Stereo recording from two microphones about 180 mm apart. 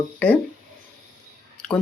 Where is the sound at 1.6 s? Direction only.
5° left (ahead or behind).